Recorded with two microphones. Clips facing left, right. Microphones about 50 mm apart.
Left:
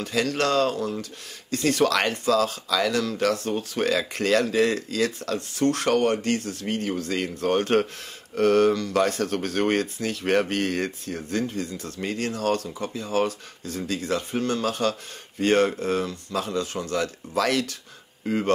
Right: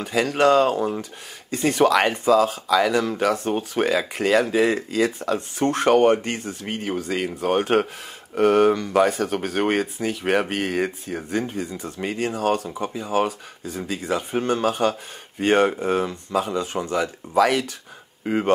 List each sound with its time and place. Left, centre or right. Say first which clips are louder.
0.0 s speech: right 5 dB; centre